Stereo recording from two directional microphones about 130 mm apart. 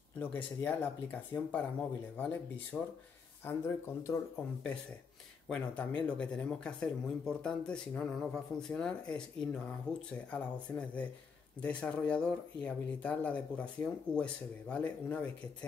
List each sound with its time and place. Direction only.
0.2 s speech: 15° left (ahead or behind)
5.5 s speech: 10° left (ahead or behind)